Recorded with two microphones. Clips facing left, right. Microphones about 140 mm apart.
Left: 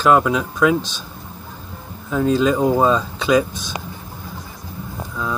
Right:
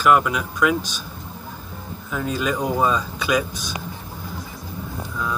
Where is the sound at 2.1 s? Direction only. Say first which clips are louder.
Left 8 dB; 25° left (ahead or behind).